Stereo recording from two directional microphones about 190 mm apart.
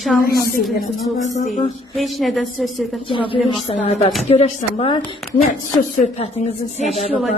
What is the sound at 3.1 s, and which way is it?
A woman's voice, 25° left (ahead or behind).